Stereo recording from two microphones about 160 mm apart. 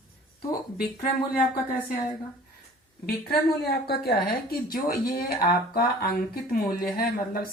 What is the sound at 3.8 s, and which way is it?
Speech, 80° left.